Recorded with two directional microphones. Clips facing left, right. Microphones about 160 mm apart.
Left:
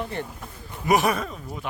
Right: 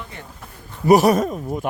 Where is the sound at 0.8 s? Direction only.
40° right (ahead or behind).